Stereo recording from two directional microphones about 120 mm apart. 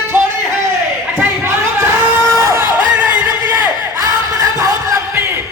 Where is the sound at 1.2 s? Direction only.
20° right (ahead or behind).